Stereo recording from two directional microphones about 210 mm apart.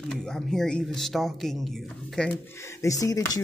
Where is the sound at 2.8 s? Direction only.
15° left (ahead or behind).